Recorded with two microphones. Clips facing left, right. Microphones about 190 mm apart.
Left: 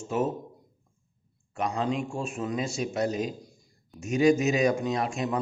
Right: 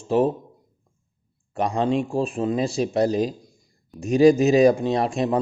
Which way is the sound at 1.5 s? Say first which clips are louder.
Right 6 dB; 35° right (ahead or behind).